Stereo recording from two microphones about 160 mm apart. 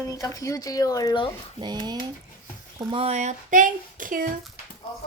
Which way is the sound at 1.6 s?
25° right (ahead or behind).